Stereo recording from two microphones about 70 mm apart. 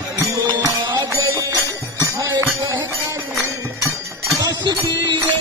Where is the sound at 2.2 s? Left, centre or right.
Right.